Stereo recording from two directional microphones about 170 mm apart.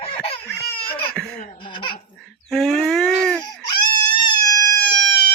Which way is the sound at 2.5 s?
5° left (ahead or behind).